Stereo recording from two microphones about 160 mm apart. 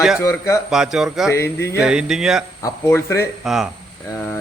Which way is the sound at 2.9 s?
15° left (ahead or behind).